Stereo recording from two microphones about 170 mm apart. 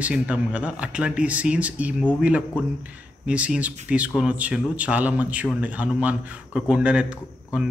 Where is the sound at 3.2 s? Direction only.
5° right (ahead or behind).